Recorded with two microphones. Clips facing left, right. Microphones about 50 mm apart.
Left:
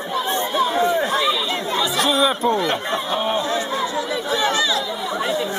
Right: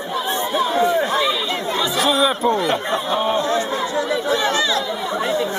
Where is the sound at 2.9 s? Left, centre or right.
Centre.